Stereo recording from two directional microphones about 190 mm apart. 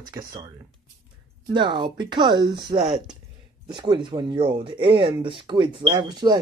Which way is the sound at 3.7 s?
25° right (ahead or behind).